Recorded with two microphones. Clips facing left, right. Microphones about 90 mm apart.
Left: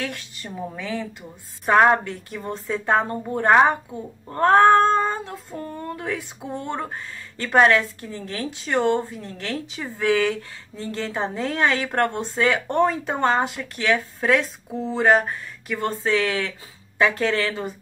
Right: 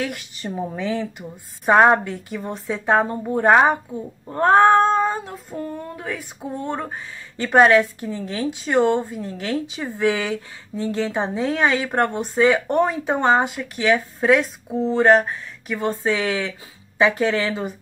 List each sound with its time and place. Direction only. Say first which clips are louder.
0.0 s a woman's voice: right 4 dB; 15° right (ahead or behind)
4.3 s cat: right 1 dB; 10° right (ahead or behind)
5.5 s speech: right 3 dB; centre (ahead or behind)
7.3 s speech: right 3 dB; 15° right (ahead or behind)
9.0 s a woman's voice: right 4 dB; 15° right (ahead or behind)
11.1 s speech: even; 5° right (ahead or behind)
16.0 s speech: even; 15° right (ahead or behind)